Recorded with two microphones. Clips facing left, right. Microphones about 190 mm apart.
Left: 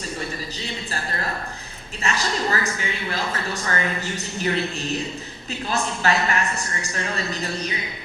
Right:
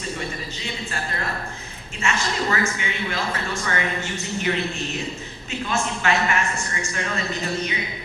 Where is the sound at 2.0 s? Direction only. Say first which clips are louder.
Even; 35° left (ahead or behind).